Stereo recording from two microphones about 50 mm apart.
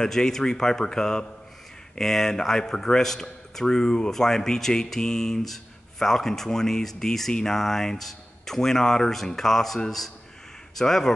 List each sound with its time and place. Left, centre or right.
0.0 s a man's voice: centre